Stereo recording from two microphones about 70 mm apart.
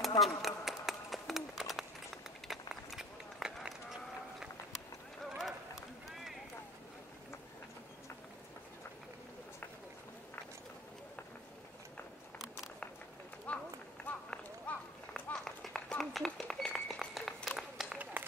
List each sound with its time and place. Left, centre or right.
0.2 s a sound: centre
2.4 s run: centre
13.5 s run: centre
15.3 s run: centre
16.7 s a sound: centre
17.6 s run: centre
18.2 s run: right